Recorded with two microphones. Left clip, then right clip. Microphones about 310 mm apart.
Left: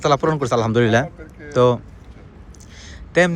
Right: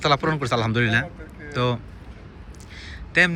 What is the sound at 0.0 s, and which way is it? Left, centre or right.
A man's voice, centre.